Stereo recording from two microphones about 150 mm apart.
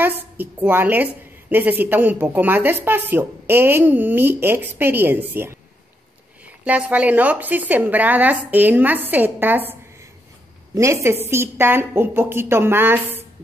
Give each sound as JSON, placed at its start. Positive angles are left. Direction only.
{"t": 0.0, "sound": "a woman's voice", "side_deg": -15}